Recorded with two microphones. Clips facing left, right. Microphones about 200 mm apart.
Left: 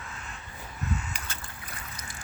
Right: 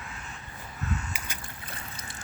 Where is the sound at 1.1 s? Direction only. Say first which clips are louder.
Even; 15° right (ahead or behind).